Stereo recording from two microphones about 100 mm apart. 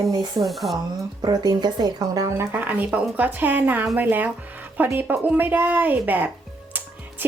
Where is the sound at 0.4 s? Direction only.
Centre (ahead or behind).